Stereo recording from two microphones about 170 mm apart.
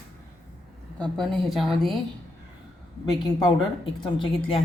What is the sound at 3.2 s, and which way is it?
A woman's voice, 25° left (ahead or behind).